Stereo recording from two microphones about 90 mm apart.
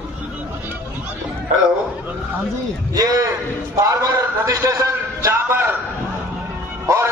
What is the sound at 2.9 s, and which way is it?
A man's voice, 45° right (ahead or behind).